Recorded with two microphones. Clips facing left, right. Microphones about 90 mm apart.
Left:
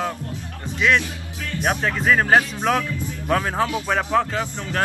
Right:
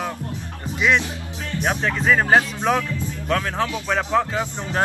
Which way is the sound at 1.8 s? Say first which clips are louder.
Even; centre (ahead or behind).